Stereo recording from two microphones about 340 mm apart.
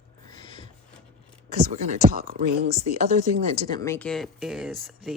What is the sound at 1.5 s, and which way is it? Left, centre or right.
Speech, right.